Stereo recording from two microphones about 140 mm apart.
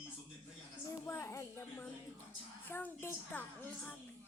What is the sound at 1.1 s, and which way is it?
Child singing, 20° left (ahead or behind).